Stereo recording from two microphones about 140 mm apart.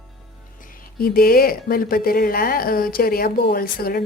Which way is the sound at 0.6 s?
90° left.